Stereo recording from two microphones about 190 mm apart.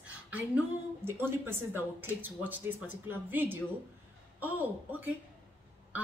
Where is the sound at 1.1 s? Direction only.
10° right (ahead or behind).